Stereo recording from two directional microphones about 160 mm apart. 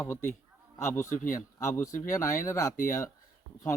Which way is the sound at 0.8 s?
20° left (ahead or behind).